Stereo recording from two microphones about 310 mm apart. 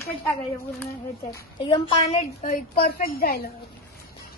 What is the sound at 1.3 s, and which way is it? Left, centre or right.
A woman's voice, centre.